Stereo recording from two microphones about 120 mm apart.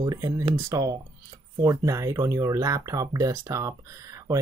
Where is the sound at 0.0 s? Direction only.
30° right (ahead or behind).